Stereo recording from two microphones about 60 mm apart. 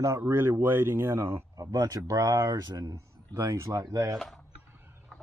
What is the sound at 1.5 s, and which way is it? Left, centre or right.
Speech, right.